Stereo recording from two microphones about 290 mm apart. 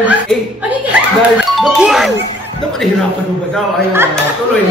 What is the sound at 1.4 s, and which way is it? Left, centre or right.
Speech, centre.